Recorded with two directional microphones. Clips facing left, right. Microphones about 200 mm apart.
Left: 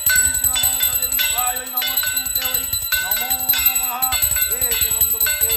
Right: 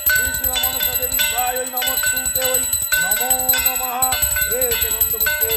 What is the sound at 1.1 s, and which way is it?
Speech, 60° right (ahead or behind).